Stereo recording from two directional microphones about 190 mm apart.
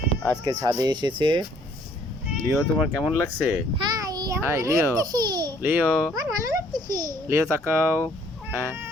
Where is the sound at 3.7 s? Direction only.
20° right (ahead or behind).